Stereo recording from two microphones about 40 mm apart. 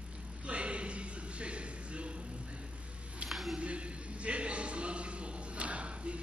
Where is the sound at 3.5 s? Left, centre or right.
Right.